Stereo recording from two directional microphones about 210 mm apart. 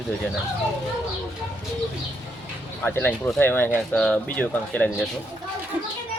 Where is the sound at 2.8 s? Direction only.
10° left (ahead or behind).